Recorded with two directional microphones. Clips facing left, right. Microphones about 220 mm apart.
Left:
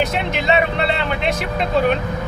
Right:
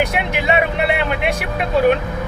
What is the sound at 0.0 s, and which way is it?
Vehicle, 10° right (ahead or behind).